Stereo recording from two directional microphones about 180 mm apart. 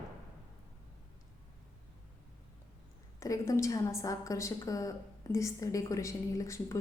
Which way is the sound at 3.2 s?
15° left (ahead or behind).